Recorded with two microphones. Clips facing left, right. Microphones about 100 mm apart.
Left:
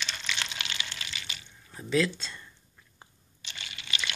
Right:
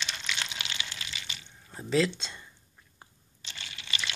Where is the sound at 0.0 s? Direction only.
10° right (ahead or behind).